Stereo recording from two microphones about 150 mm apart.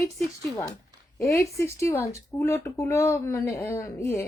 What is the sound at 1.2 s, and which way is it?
Speech, 20° left (ahead or behind).